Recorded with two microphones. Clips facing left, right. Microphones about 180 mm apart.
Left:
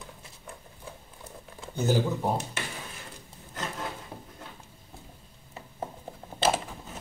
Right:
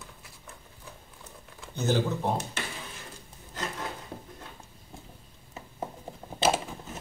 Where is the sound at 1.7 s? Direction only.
10° left (ahead or behind).